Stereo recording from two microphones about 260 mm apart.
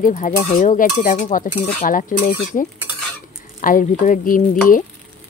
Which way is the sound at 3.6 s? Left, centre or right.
Left.